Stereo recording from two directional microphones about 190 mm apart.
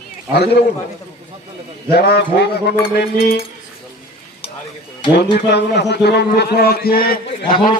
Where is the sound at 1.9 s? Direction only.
55° left (ahead or behind).